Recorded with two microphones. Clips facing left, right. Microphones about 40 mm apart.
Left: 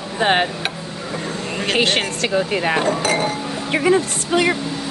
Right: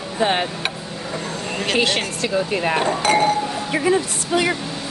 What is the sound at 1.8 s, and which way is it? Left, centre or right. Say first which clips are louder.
Speech: left 3 dB; left.